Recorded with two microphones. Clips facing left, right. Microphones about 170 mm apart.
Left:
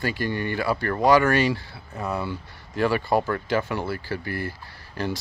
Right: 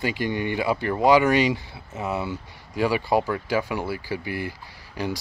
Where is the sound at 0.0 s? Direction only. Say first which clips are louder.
Right 1 dB; 15° right (ahead or behind).